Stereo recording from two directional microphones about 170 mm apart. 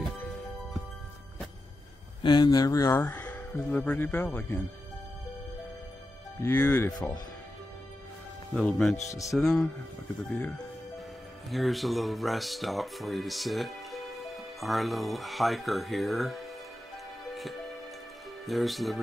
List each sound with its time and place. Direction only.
2.2 s speech: 25° left (ahead or behind); by 4.6 s 10° left (ahead or behind)
6.4 s speech: 15° left (ahead or behind)
8.5 s speech: 5° left (ahead or behind)
11.5 s speech: centre (ahead or behind)
17.3 s music: centre (ahead or behind)
18.4 s speech: centre (ahead or behind)